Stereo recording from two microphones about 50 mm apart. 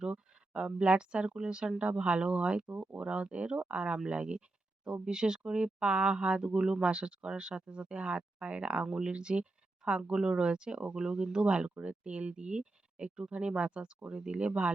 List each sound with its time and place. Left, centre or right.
0.0 s speech: centre